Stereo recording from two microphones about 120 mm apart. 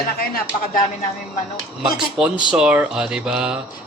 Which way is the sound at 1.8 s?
5° right (ahead or behind).